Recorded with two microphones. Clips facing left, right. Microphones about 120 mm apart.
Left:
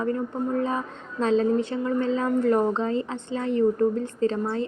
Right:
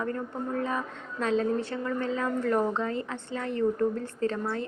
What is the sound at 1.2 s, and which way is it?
Speech, 30° left (ahead or behind).